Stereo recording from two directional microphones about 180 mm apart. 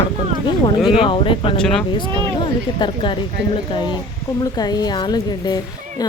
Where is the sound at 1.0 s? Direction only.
30° left (ahead or behind).